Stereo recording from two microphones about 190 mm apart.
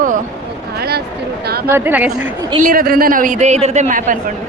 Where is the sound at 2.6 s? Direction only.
50° right (ahead or behind).